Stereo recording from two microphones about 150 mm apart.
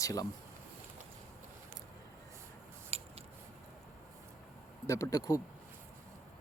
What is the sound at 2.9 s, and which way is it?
Squish, 40° right (ahead or behind).